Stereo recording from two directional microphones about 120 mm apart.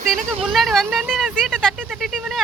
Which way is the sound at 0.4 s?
Centre (ahead or behind).